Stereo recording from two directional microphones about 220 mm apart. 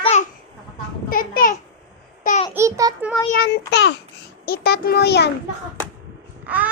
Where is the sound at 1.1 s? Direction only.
40° left (ahead or behind).